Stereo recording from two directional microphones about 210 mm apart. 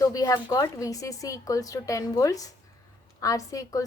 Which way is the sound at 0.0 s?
15° left (ahead or behind).